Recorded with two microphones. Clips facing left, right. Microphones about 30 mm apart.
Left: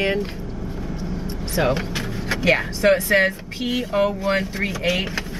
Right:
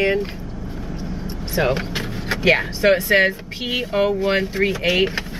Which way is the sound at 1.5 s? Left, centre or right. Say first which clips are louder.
Right 1 dB; centre.